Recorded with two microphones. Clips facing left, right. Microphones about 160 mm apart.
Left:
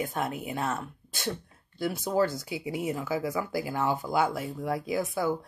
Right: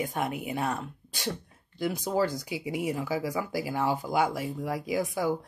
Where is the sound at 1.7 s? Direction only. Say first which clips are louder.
Left 1 dB; 15° right (ahead or behind).